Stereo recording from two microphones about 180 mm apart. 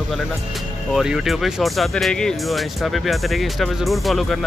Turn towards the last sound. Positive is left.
turn(degrees=0)  # may be behind; listen again after turning